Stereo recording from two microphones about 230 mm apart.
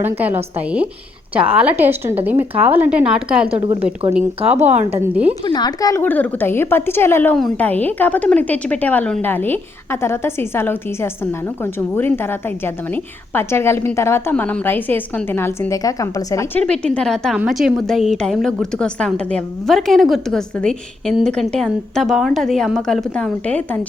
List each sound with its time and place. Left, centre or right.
0.0 s a woman's voice: centre
3.5 s a woman's voice: right
4.9 s a woman's voice: centre
5.5 s a woman's voice: centre